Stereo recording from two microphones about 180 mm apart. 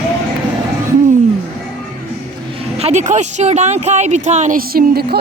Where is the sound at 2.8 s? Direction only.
40° right (ahead or behind); by 5.2 s 55° right (ahead or behind).